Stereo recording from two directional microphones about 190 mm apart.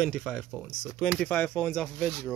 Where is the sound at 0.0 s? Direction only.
5° left (ahead or behind).